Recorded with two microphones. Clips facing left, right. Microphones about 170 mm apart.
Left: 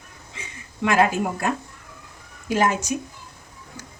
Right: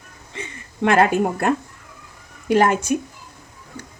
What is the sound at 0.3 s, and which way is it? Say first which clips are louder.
Speech: right 5 dB; 60° right (ahead or behind).